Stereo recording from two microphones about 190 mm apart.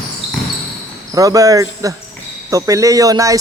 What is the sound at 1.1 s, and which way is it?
A man's voice, 15° right (ahead or behind).